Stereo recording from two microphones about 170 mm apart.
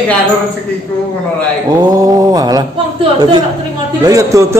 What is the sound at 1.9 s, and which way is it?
Mantra, 20° right (ahead or behind).